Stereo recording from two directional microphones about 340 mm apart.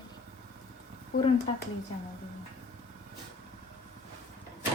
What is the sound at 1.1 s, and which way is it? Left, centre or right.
Speech, left.